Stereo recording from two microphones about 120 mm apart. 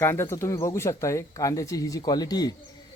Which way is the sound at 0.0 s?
20° left (ahead or behind).